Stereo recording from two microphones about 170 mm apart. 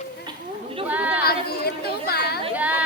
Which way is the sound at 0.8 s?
10° right (ahead or behind).